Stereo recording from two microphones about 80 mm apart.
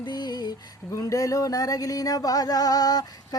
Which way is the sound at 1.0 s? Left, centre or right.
Left.